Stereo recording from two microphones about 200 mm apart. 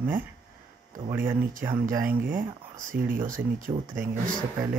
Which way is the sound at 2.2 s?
45° right (ahead or behind).